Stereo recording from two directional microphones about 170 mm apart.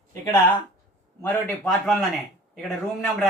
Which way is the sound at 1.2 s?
10° left (ahead or behind).